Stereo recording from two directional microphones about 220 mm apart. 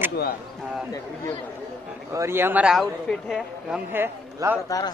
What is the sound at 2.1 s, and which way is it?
Speech, 10° right (ahead or behind).